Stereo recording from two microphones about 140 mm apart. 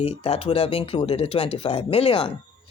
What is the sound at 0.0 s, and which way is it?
A woman's voice, 45° left (ahead or behind).